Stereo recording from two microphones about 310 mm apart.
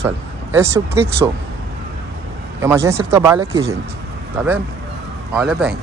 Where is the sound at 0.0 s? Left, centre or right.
Centre.